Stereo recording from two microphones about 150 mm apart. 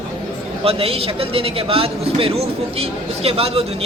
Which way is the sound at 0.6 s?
40° right (ahead or behind).